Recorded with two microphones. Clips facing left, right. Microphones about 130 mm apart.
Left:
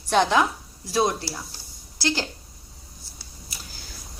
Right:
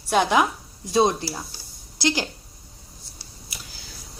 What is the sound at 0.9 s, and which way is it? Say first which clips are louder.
A woman's voice: right 3 dB; 20° right (ahead or behind).